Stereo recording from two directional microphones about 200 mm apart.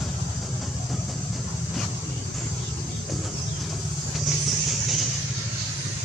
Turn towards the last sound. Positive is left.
turn(degrees=0)  # may be behind; listen again after turning